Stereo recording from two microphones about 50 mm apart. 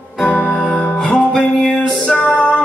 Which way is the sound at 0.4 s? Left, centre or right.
Left.